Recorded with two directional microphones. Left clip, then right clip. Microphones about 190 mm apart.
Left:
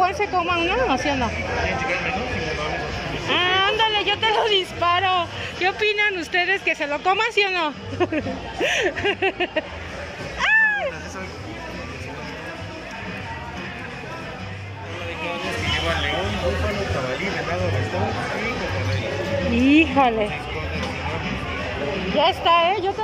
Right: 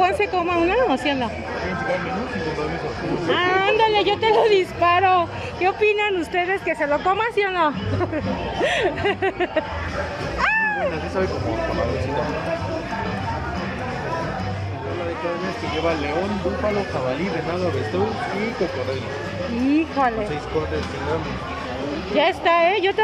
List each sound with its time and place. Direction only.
0.0 s speech: 15° right (ahead or behind)
3.3 s a woman's voice: centre (ahead or behind)
3.5 s a woman's voice: 20° right (ahead or behind); by 9.7 s centre (ahead or behind)
10.4 s a sound: 5° right (ahead or behind)
19.7 s a woman's voice: 5° left (ahead or behind)
22.1 s speech: 20° right (ahead or behind)